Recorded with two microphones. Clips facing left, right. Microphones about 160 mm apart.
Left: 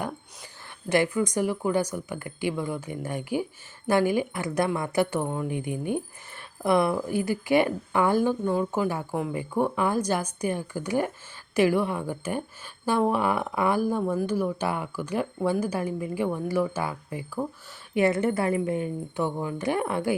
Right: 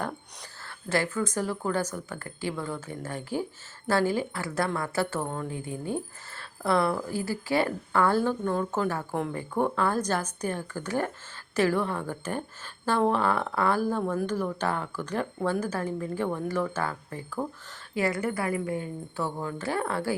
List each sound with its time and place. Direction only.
0.9 s a woman's voice: 15° left (ahead or behind)
17.9 s a woman's voice: 25° left (ahead or behind)